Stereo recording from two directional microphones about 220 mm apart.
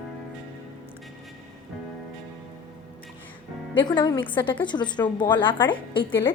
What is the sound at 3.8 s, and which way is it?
Speech, 20° left (ahead or behind).